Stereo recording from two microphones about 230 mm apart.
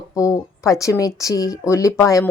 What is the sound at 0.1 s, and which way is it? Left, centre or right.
Speech, centre.